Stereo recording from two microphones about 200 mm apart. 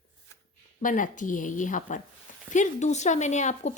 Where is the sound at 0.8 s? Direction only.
40° left (ahead or behind).